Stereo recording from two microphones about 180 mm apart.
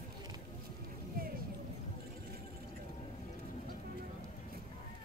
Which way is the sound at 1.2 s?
55° right (ahead or behind).